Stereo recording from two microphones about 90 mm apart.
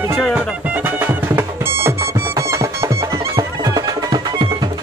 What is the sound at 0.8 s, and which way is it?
Music, 25° right (ahead or behind).